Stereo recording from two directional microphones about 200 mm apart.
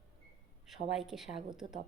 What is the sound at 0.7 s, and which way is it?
Speech, centre (ahead or behind).